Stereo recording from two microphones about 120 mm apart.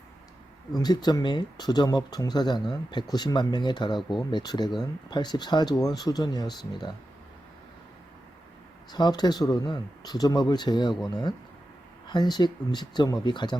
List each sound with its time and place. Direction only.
0.8 s speech: 35° left (ahead or behind)
8.9 s speech: 35° left (ahead or behind)